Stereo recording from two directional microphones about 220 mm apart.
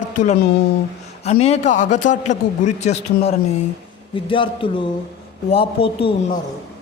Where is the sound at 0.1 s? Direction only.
35° left (ahead or behind).